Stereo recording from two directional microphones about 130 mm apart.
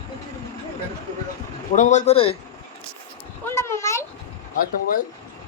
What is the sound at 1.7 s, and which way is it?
Speech, 65° left (ahead or behind).